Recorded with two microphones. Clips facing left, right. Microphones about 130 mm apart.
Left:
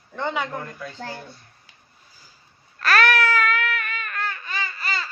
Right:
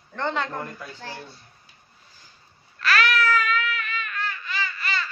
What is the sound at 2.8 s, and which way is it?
Baby cry, 50° left (ahead or behind).